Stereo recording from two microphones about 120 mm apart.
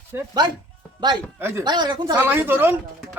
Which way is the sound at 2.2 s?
15° right (ahead or behind).